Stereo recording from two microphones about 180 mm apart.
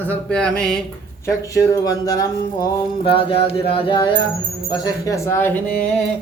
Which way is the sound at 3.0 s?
30° left (ahead or behind).